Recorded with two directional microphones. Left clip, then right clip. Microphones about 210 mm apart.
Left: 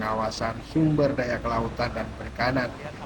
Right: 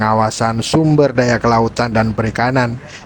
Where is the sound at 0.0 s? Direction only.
50° right (ahead or behind).